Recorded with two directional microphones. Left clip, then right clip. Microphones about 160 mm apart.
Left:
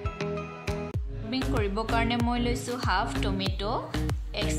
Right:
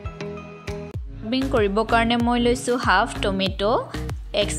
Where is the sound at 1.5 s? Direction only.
45° right (ahead or behind).